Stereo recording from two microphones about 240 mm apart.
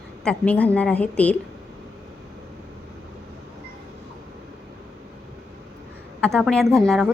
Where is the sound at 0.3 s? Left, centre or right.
Centre.